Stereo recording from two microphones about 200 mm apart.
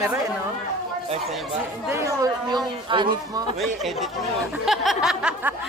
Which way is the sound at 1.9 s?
15° right (ahead or behind).